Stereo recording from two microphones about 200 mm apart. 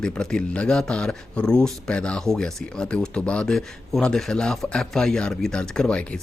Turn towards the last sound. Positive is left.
turn(degrees=5)  # may be behind; listen again after turning